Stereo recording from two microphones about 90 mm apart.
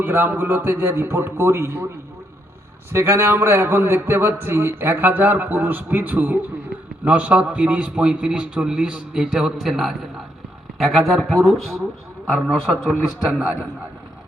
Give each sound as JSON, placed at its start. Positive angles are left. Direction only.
{"t": 0.0, "sound": "a man's voice", "side_deg": -25}
{"t": 2.9, "sound": "a man's voice", "side_deg": -30}